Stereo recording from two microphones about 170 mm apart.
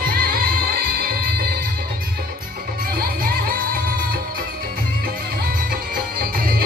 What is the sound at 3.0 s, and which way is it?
Music, 60° right (ahead or behind).